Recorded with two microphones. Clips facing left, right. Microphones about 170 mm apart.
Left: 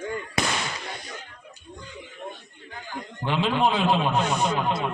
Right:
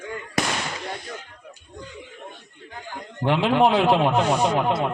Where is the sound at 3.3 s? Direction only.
65° right (ahead or behind).